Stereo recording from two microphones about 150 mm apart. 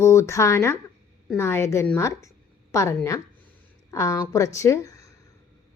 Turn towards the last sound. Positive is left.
turn(degrees=20)  # may be behind; listen again after turning